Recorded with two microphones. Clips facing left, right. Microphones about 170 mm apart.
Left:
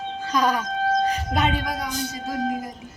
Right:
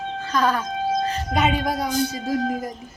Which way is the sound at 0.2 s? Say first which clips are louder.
Even; 15° left (ahead or behind).